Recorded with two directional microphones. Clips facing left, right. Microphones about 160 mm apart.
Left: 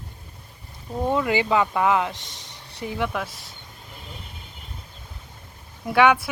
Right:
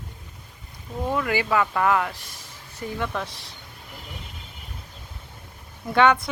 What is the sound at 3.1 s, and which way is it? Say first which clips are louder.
Speech: left 1 dB; centre (ahead or behind).